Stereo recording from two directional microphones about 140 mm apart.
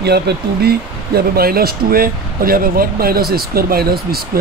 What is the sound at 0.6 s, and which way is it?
Speech, 90° right.